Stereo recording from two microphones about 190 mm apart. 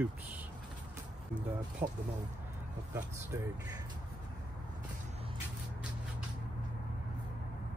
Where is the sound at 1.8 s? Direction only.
30° right (ahead or behind).